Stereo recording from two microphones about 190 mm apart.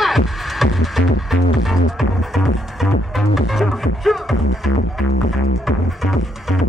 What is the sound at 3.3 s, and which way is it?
Music, centre (ahead or behind).